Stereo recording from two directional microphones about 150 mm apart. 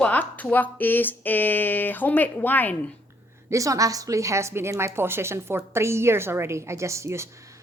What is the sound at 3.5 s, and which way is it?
A woman's voice, 20° right (ahead or behind).